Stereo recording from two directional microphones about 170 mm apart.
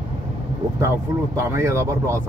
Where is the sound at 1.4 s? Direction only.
15° right (ahead or behind).